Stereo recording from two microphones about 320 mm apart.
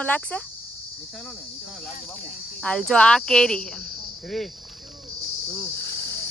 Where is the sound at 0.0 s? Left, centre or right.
Centre.